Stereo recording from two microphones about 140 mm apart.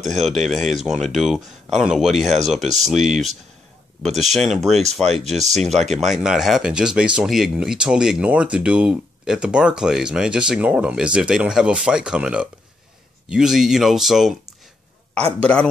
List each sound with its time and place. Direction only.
0.0 s speech: centre (ahead or behind)
5.0 s speech: 50° right (ahead or behind)
5.3 s speech: centre (ahead or behind)
15.4 s speech: 5° left (ahead or behind)